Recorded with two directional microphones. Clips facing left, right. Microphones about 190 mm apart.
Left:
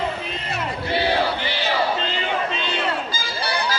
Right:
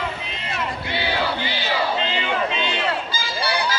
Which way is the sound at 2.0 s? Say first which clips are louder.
Right 1 dB; 40° left (ahead or behind).